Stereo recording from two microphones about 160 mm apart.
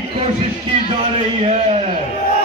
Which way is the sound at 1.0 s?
40° right (ahead or behind).